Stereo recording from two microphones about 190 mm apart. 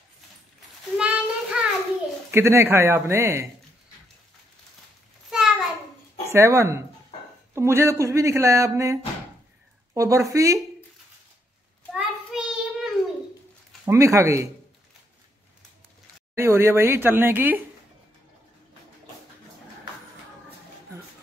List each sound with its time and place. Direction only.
0.9 s child singing: 5° right (ahead or behind)
2.3 s speech: 15° right (ahead or behind)
5.3 s a sound: 5° right (ahead or behind)
6.3 s speech: 15° right (ahead or behind)
11.9 s child singing: 5° right (ahead or behind)
13.8 s speech: 15° right (ahead or behind)
16.3 s speech: 15° right (ahead or behind)